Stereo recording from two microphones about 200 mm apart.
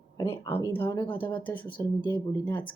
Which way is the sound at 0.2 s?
10° left (ahead or behind).